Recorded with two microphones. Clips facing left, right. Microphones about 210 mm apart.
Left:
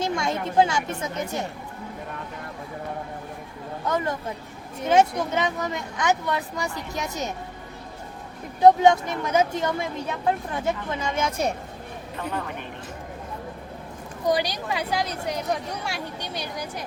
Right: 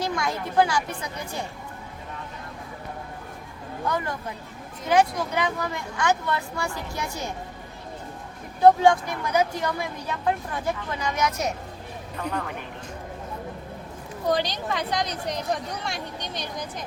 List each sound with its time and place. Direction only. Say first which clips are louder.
0.0 s speech: left 2 dB; 25° left (ahead or behind)
3.8 s speech: left 2 dB; 20° left (ahead or behind)
8.6 s speech: left 1 dB; 20° left (ahead or behind)
12.2 s speech: right 1 dB; 5° left (ahead or behind)
14.3 s a woman's voice: left 1 dB; 10° left (ahead or behind)